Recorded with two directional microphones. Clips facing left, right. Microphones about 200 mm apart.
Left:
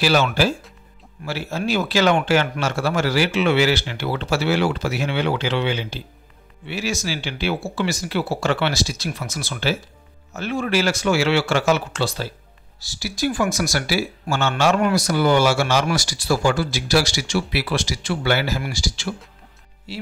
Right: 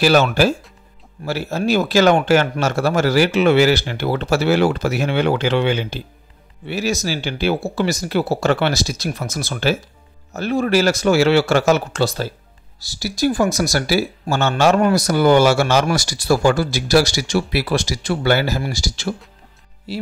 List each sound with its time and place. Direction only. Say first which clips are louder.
0.0 s speech: right 4 dB; 45° right (ahead or behind)